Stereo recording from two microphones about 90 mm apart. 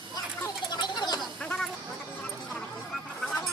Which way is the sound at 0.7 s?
55° left (ahead or behind).